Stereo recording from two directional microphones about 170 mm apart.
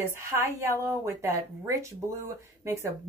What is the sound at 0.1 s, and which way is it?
A woman's voice, 15° right (ahead or behind).